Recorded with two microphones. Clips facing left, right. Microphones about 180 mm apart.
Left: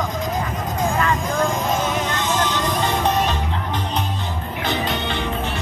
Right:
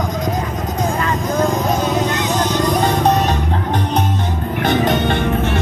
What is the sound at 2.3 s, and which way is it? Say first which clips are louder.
Music: right 4 dB; 40° right (ahead or behind).